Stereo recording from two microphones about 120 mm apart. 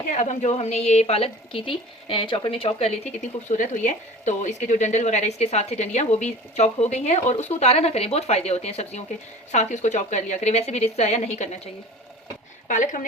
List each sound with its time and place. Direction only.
0.1 s a woman's voice: 90° left; by 3.1 s 60° left (ahead or behind)
3.5 s speech: 85° left; by 11.7 s 65° left (ahead or behind)
12.6 s speech: 90° left